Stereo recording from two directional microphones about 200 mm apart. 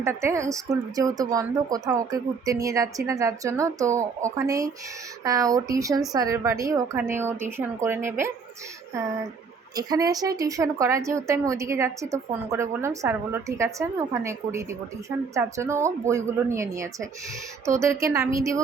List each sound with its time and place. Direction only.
0.0 s a woman's voice: 15° right (ahead or behind)
9.7 s a woman's voice: 20° right (ahead or behind)